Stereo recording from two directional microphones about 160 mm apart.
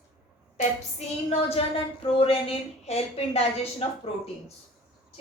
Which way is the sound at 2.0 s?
35° left (ahead or behind).